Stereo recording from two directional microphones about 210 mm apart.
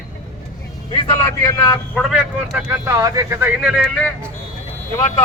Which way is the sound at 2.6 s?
10° right (ahead or behind).